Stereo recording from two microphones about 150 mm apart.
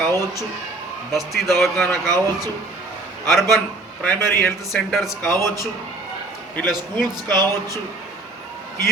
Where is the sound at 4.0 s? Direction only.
15° left (ahead or behind).